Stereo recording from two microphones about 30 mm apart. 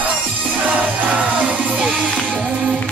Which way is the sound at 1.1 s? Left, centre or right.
Right.